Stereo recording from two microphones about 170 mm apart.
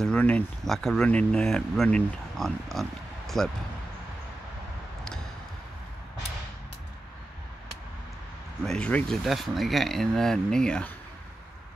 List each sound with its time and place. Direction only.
0.0 s speech: 5° left (ahead or behind)
8.6 s speech: 5° left (ahead or behind)